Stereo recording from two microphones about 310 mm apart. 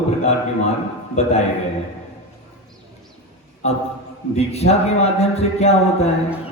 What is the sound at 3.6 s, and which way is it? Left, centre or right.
A man's voice, left.